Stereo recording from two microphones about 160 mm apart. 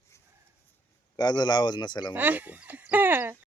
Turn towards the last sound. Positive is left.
turn(degrees=-10)  # may be behind; listen again after turning